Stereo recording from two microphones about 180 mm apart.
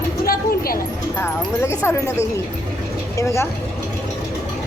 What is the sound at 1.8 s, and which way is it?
A woman's voice, 15° left (ahead or behind).